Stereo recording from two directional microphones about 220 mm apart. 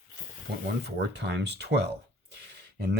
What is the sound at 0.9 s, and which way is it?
Speech, 50° right (ahead or behind).